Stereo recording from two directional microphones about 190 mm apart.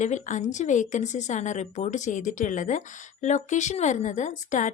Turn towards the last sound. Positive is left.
turn(degrees=40)  # may be behind; listen again after turning